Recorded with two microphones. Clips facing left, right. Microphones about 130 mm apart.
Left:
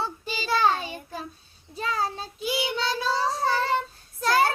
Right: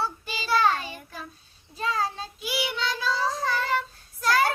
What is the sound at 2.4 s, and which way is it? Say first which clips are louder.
Child singing: left 3 dB; 25° left (ahead or behind).